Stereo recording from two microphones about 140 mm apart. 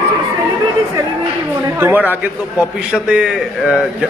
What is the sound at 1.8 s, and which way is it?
A man's voice, 15° right (ahead or behind).